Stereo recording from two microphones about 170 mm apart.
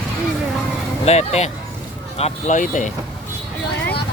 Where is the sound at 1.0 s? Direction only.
40° left (ahead or behind).